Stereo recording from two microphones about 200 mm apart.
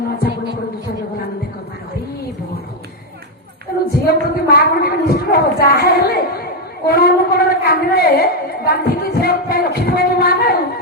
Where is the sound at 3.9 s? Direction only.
50° left (ahead or behind).